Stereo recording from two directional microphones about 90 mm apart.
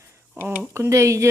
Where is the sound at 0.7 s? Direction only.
35° right (ahead or behind).